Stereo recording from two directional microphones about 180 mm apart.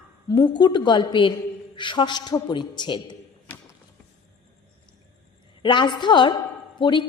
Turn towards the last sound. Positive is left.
turn(degrees=25)  # may be behind; listen again after turning